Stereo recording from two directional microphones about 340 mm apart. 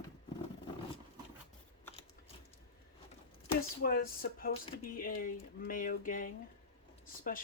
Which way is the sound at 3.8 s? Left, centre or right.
Left.